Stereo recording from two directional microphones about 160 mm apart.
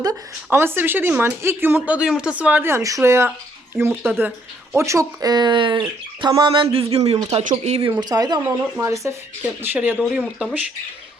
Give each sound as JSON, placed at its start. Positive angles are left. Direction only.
{"t": 0.0, "sound": "speech", "side_deg": -20}
{"t": 7.9, "sound": "speech", "side_deg": -25}